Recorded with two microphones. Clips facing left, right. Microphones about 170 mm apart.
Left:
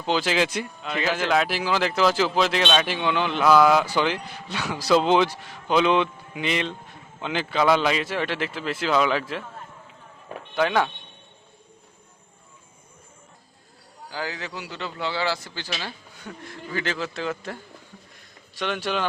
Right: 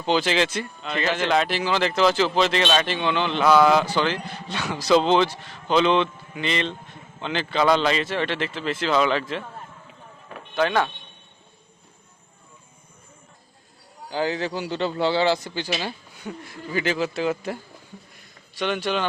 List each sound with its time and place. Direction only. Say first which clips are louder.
0.0 s speech: right 1 dB; centre (ahead or behind)
10.5 s speech: even; 5° left (ahead or behind)
14.1 s a man's voice: right 7 dB; 25° right (ahead or behind)
18.6 s speech: right 2 dB; centre (ahead or behind)